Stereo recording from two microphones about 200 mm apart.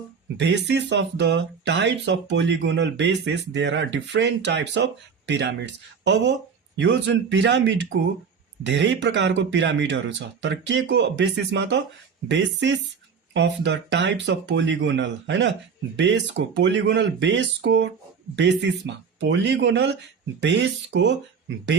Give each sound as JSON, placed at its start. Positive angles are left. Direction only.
{"t": 0.3, "sound": "speech", "side_deg": -60}